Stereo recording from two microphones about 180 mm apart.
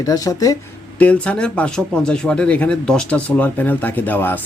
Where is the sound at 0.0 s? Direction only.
20° left (ahead or behind).